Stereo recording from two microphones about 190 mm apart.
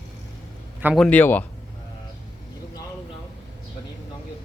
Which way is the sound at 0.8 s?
Centre (ahead or behind).